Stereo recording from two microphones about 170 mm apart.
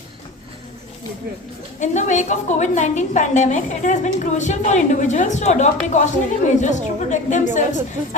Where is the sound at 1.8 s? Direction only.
45° left (ahead or behind).